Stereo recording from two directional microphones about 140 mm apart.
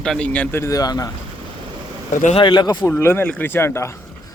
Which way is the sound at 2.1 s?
65° left (ahead or behind).